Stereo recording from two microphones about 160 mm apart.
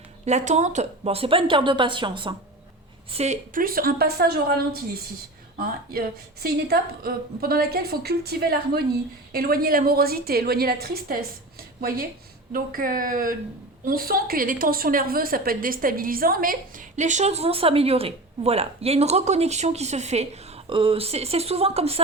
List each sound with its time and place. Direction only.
0.3 s speech: 45° right (ahead or behind); by 2.3 s 30° right (ahead or behind)
3.1 s speech: 40° right (ahead or behind)
3.5 s a woman's voice: 65° right (ahead or behind)
9.3 s a woman's voice: 65° right (ahead or behind); by 22.0 s 40° right (ahead or behind)